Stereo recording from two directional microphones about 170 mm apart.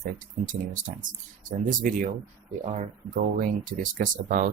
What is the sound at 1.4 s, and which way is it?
Speech, 50° right (ahead or behind).